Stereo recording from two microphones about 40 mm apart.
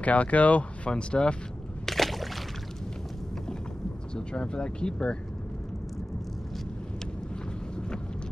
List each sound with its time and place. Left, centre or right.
0.0 s speech: left
1.9 s a sound: centre
4.1 s speech: left